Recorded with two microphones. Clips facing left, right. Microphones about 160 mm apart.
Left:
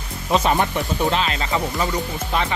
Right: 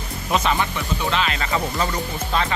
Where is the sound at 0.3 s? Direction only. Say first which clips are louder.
Left 3 dB; 45° left (ahead or behind).